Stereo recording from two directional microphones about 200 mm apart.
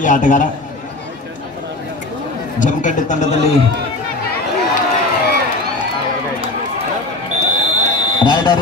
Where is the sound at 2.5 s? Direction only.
40° left (ahead or behind).